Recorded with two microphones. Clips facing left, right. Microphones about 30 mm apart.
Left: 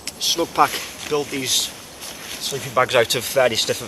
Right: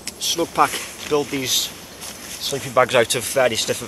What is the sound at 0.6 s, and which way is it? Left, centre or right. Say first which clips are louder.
Speech: left 1 dB; centre.